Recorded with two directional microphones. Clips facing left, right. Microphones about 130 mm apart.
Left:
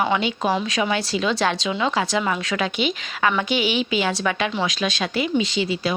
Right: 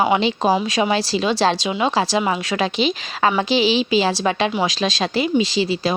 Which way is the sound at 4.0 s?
30° right (ahead or behind).